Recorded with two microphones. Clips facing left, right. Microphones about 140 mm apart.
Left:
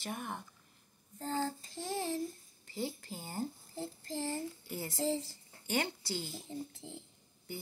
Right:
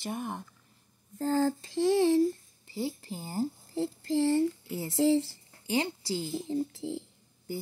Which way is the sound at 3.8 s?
90° right.